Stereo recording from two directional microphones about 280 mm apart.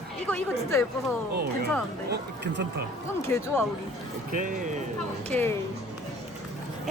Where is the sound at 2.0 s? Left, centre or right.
Right.